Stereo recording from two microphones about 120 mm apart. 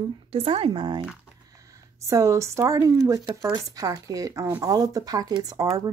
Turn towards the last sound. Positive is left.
turn(degrees=-30)  # may be behind; listen again after turning